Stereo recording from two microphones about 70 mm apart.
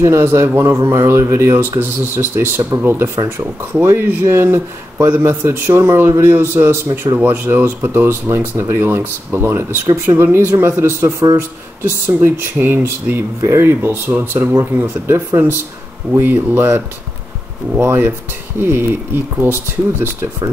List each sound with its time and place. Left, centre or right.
0.0 s speech: right
13.4 s speech: right
13.7 s speech: right